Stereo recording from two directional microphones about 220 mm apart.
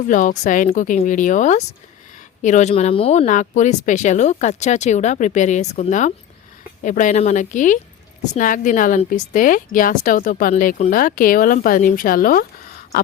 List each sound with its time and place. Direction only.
0.1 s speech: 35° left (ahead or behind)